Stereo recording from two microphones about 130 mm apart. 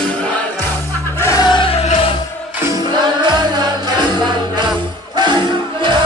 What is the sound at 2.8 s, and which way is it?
Music, 35° right (ahead or behind).